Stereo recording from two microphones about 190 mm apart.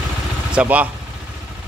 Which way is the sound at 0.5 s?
5° right (ahead or behind).